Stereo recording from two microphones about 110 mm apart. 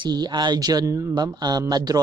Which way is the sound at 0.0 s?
40° right (ahead or behind).